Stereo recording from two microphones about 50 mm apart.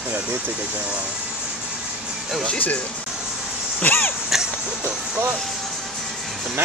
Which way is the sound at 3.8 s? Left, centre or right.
Left.